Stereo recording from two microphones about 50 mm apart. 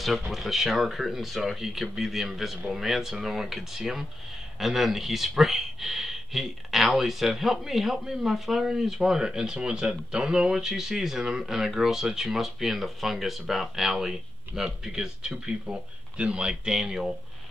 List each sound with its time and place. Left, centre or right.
0.0 s speech: centre
15.6 s speech: right